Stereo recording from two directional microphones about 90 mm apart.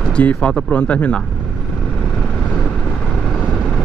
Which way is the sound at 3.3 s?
10° left (ahead or behind).